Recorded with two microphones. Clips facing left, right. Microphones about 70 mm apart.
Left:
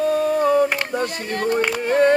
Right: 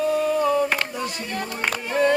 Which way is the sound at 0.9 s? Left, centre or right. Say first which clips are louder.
Left 5 dB; left.